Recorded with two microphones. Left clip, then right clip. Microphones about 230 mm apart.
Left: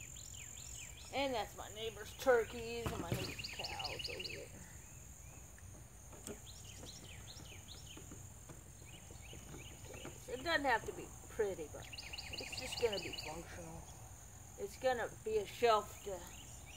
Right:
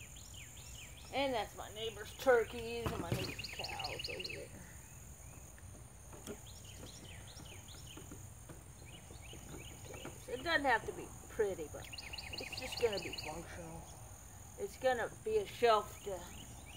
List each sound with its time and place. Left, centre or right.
0.7 s speech: centre
9.9 s cricket: centre
11.3 s speech: centre
11.9 s a sound: centre
12.9 s speech: centre
14.8 s speech: centre